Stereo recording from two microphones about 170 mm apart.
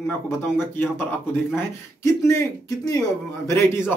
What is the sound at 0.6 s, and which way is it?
Speech, 10° left (ahead or behind).